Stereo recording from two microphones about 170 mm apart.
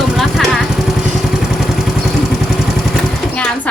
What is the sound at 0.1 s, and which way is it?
Vehicle, centre (ahead or behind).